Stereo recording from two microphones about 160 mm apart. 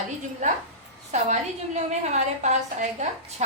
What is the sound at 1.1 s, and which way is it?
A woman's voice, 45° right (ahead or behind).